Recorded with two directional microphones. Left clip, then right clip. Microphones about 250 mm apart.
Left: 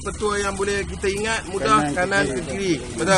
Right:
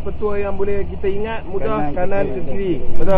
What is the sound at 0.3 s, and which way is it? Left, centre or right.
Speech, left.